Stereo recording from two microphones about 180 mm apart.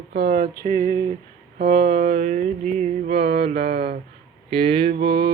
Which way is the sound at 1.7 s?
35° right (ahead or behind).